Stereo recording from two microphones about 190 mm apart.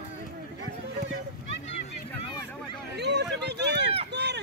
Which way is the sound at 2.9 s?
65° right (ahead or behind).